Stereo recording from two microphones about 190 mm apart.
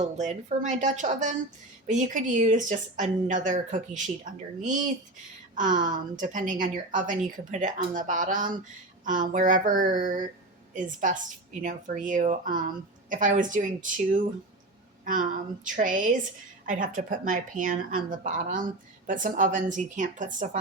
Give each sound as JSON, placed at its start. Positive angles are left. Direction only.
{"t": 0.0, "sound": "speech", "side_deg": -40}
{"t": 5.5, "sound": "a woman's voice", "side_deg": -45}